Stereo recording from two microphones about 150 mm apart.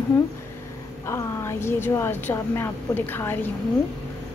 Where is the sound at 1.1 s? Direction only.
15° left (ahead or behind).